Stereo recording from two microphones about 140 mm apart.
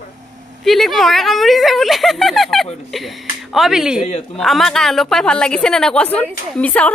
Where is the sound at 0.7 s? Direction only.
Centre (ahead or behind).